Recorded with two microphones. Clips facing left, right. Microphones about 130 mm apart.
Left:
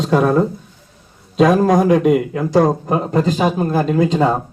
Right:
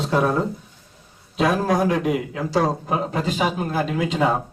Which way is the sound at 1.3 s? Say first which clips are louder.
Left 7 dB; 40° left (ahead or behind).